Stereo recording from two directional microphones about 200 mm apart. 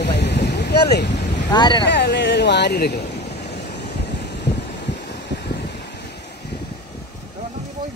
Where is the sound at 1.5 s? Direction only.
20° left (ahead or behind).